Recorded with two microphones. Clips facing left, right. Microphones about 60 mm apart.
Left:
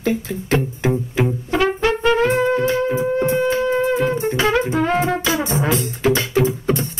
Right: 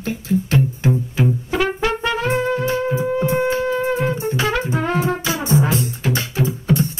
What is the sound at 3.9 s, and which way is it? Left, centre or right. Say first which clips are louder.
Music: left 2 dB; left.